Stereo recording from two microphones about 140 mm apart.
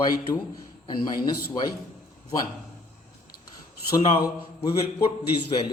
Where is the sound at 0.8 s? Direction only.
30° left (ahead or behind).